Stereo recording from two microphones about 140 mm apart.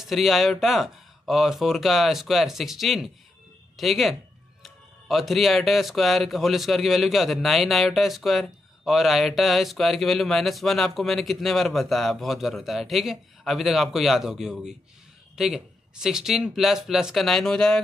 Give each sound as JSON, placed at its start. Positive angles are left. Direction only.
{"t": 0.0, "sound": "speech", "side_deg": 0}